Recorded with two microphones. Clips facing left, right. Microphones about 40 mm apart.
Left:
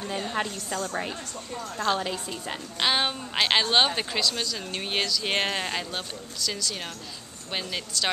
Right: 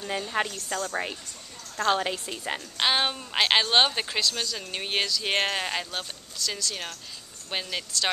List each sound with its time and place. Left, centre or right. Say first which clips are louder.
0.5 s a woman's voice: even; centre
2.8 s a woman's voice: even; centre